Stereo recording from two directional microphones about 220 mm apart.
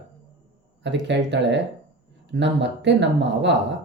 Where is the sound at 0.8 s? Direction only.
55° right (ahead or behind).